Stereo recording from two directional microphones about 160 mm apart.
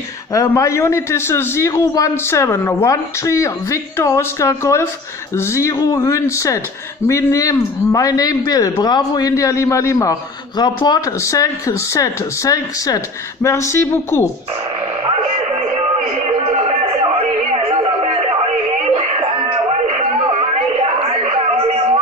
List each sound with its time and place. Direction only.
0.3 s a man's voice: 20° left (ahead or behind)
16.3 s a sound: 40° right (ahead or behind)
18.7 s music: 40° right (ahead or behind)